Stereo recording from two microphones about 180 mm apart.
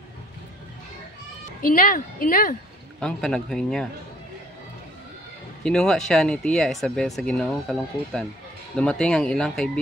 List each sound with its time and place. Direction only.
1.6 s a woman's voice: 50° left (ahead or behind)
3.0 s speech: 5° left (ahead or behind)
5.6 s speech: 5° left (ahead or behind)